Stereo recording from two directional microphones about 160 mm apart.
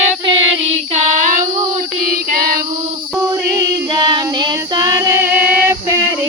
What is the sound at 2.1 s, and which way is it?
Child singing, 65° right (ahead or behind).